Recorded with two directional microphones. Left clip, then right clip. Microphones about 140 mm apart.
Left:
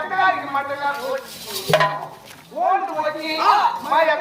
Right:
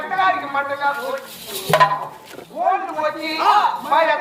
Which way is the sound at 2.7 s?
25° right (ahead or behind).